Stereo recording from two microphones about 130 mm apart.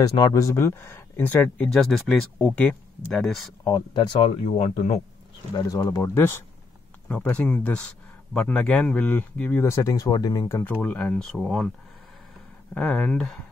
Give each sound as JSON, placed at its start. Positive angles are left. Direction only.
{"t": 0.0, "sound": "speech", "side_deg": 25}
{"t": 1.9, "sound": "speech", "side_deg": 0}
{"t": 3.6, "sound": "speech", "side_deg": 30}
{"t": 4.6, "sound": "speech", "side_deg": 55}
{"t": 5.5, "sound": "speech", "side_deg": 30}
{"t": 10.6, "sound": "speech", "side_deg": 10}
{"t": 12.7, "sound": "speech", "side_deg": 10}